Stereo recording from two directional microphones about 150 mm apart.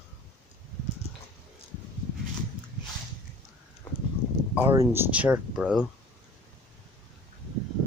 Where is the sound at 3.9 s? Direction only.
10° left (ahead or behind).